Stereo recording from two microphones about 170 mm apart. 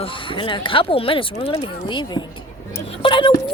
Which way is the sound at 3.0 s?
30° left (ahead or behind).